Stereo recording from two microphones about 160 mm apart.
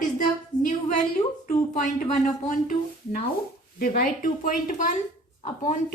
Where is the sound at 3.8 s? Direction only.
60° left (ahead or behind).